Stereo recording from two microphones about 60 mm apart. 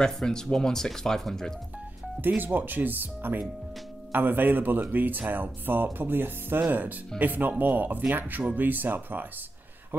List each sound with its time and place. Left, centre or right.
0.0 s speech: centre
2.2 s speech: right